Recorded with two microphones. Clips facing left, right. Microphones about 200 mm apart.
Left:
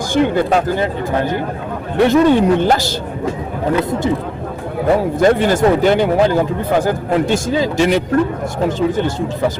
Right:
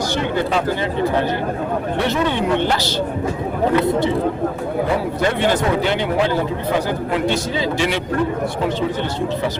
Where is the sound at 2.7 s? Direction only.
45° left (ahead or behind).